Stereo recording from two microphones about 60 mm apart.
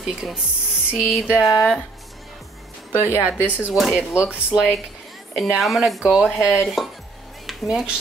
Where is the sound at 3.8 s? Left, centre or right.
Centre.